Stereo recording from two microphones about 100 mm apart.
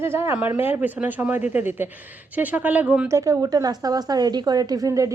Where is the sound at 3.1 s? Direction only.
30° right (ahead or behind).